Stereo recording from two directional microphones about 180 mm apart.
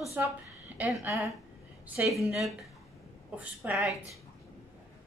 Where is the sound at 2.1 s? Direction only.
Centre (ahead or behind).